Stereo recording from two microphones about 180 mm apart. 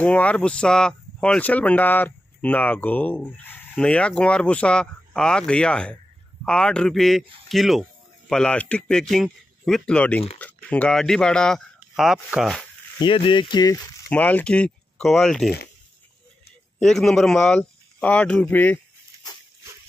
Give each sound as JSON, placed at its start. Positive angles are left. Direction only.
{"t": 0.0, "sound": "speech", "side_deg": 5}
{"t": 13.0, "sound": "speech", "side_deg": 25}
{"t": 14.1, "sound": "speech", "side_deg": 10}
{"t": 16.8, "sound": "speech", "side_deg": 0}
{"t": 19.1, "sound": "dog", "side_deg": -20}